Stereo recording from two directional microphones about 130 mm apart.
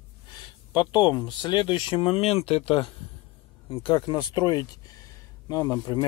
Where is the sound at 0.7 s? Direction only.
35° left (ahead or behind).